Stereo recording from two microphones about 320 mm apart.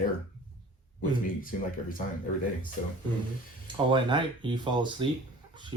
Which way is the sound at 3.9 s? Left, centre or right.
Centre.